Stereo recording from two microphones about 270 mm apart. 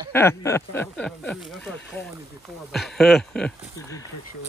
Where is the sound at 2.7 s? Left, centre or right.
Centre.